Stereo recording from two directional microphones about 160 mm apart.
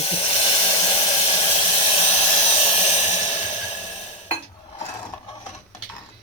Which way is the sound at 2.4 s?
40° left (ahead or behind).